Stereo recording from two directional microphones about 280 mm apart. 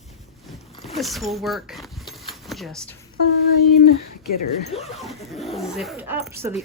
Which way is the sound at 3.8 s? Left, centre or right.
Left.